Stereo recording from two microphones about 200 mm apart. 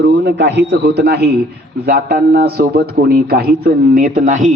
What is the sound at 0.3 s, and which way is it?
A man's voice, 60° right (ahead or behind).